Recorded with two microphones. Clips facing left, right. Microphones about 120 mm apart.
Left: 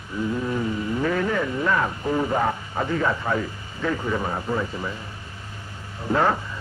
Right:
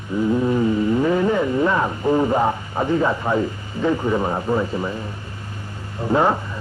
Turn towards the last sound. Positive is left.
turn(degrees=-20)  # may be behind; listen again after turning